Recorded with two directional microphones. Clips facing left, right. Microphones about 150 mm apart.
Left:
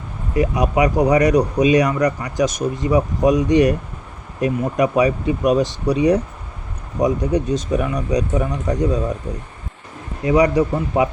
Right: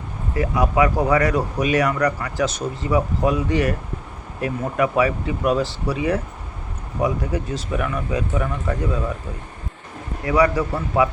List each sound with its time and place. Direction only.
0.3 s speech: 20° left (ahead or behind)
10.2 s speech: 20° left (ahead or behind)